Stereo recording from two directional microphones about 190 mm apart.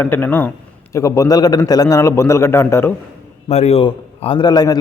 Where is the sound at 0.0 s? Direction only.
10° left (ahead or behind).